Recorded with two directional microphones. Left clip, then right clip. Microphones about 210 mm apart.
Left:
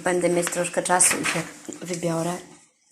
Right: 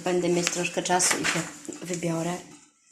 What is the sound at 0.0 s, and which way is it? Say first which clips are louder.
Speech: left 3 dB; 10° left (ahead or behind).